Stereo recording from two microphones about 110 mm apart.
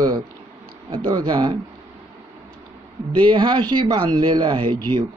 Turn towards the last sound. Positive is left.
turn(degrees=-45)  # may be behind; listen again after turning